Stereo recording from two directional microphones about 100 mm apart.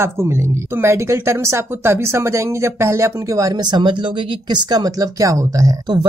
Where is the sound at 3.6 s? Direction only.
45° right (ahead or behind).